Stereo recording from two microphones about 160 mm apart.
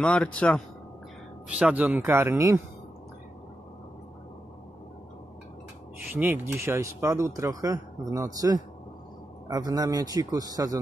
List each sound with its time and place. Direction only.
0.0 s a man's voice: 5° left (ahead or behind)
1.6 s speech: 10° right (ahead or behind)
6.1 s speech: 15° right (ahead or behind)